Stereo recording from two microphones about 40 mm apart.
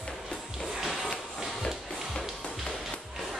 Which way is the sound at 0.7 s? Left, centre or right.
Centre.